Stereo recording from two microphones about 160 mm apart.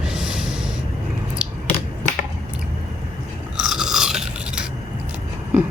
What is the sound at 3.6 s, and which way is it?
Filing, 5° right (ahead or behind).